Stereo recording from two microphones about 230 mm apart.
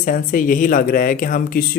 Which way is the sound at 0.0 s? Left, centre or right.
Left.